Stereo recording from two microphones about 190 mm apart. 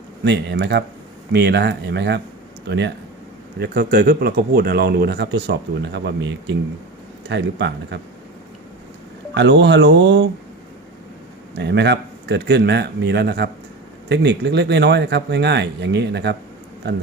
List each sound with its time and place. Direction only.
0.3 s speech: 65° right (ahead or behind)
9.3 s speech: 70° right (ahead or behind)
11.6 s speech: 65° right (ahead or behind)